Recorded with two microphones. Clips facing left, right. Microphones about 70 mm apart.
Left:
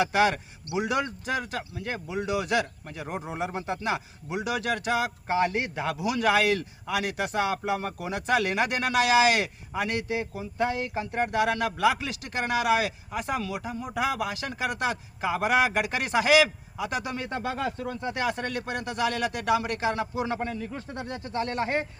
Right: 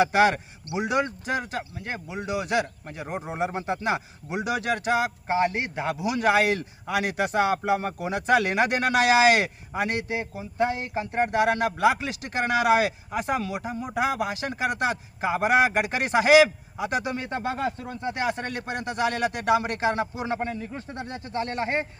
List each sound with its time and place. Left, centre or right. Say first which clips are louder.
0.0 s speech: right 3 dB; right
0.7 s speech: right 2 dB; centre
1.3 s speech: right 2 dB; right
2.1 s speech: even; centre; by 10.0 s right
10.1 s a man's voice: even; centre
17.0 s speech: right 2 dB; centre
17.4 s speech: right 1 dB; right
20.1 s speech: even; centre